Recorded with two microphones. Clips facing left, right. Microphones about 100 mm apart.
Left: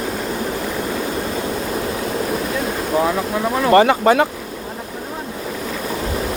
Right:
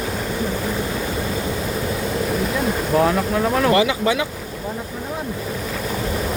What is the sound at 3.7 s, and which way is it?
Speech, 50° left (ahead or behind).